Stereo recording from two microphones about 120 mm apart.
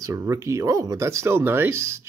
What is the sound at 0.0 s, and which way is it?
Speech, 25° right (ahead or behind).